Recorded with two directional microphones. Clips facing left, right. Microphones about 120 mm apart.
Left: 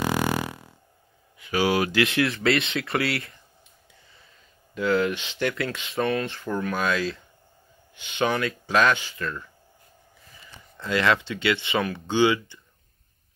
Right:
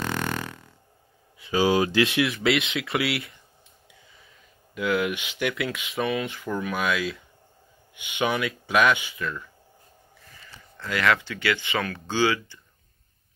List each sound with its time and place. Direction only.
0.0 s a sound: 10° left (ahead or behind)
1.4 s speech: 20° right (ahead or behind)
2.2 s speech: centre (ahead or behind)
4.7 s speech: 10° right (ahead or behind)
9.2 s speech: centre (ahead or behind)
10.8 s speech: 25° left (ahead or behind)